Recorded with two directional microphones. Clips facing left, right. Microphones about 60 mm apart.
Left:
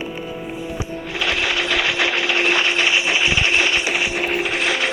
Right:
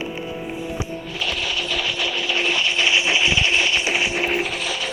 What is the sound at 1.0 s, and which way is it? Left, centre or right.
Sewing machine, left.